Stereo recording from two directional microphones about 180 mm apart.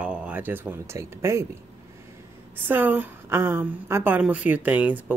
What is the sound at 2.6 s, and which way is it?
Speech, 10° right (ahead or behind).